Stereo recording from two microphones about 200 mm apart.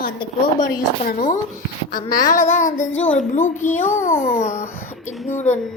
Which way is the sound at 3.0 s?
5° left (ahead or behind).